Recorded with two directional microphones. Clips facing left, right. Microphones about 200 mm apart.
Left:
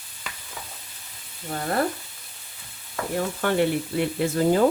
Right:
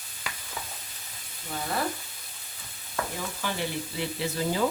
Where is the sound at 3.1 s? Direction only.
60° left (ahead or behind).